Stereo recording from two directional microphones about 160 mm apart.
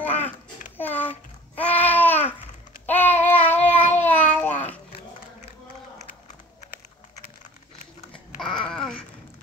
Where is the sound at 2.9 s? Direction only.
10° left (ahead or behind).